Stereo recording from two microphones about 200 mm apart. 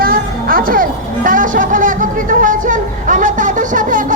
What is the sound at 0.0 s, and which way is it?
Music, 45° right (ahead or behind).